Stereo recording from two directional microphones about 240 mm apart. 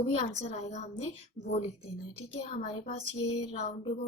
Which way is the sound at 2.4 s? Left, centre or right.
Left.